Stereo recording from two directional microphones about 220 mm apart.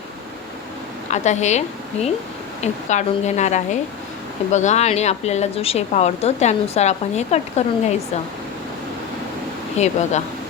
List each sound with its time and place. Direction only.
1.1 s speech: 30° left (ahead or behind)
9.7 s speech: 30° left (ahead or behind)